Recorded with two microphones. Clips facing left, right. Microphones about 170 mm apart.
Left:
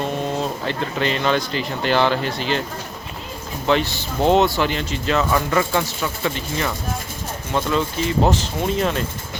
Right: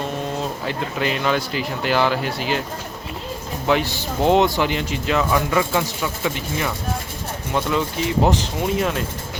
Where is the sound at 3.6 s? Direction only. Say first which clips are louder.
Left 1 dB; 10° right (ahead or behind).